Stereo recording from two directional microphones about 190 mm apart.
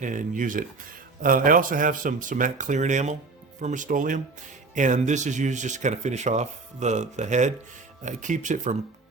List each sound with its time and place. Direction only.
0.0 s speech: 45° right (ahead or behind)